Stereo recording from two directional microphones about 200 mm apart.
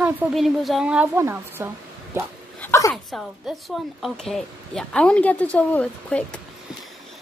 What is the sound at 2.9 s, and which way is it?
A woman's voice, centre (ahead or behind).